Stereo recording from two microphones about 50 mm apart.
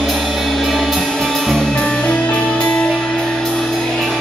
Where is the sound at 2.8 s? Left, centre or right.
Centre.